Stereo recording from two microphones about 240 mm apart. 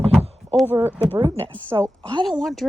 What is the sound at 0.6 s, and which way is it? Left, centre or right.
Speech, centre.